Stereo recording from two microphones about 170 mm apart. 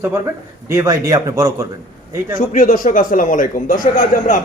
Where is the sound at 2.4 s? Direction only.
50° left (ahead or behind).